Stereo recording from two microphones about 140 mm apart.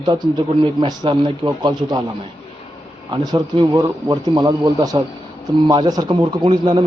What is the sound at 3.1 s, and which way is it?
Speech, 30° right (ahead or behind).